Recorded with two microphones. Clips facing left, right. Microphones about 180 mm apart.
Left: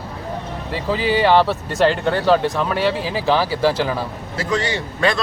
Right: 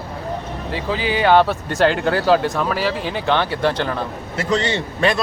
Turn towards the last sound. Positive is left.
turn(degrees=-20)  # may be behind; listen again after turning